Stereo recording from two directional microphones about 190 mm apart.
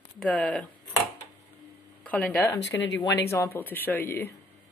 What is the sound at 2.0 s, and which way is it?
Speech, 10° left (ahead or behind).